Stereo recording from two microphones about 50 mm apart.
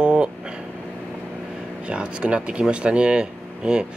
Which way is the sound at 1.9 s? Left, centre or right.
Right.